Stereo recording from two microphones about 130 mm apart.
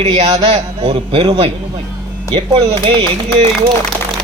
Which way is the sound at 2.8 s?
40° right (ahead or behind).